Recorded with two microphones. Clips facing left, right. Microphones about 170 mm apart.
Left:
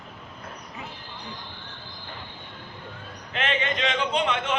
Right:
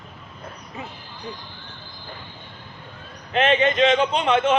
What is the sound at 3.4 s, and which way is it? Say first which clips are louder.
Speech: right 9 dB; 20° right (ahead or behind).